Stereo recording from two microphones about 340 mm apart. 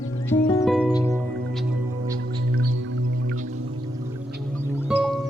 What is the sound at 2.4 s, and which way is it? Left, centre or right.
Music, right.